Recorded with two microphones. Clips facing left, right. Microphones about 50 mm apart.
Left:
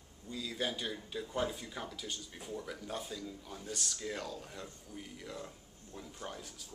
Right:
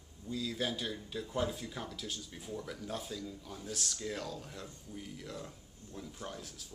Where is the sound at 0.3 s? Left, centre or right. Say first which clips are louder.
Right 2 dB; centre.